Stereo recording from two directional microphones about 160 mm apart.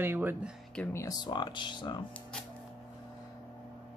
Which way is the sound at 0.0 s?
15° right (ahead or behind).